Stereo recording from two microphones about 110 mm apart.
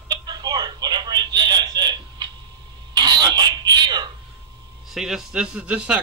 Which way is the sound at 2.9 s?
40° right (ahead or behind).